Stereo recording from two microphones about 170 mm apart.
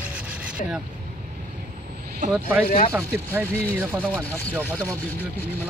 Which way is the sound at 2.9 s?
15° right (ahead or behind).